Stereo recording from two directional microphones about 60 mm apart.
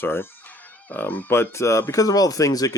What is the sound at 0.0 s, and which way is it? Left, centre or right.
Speech, left.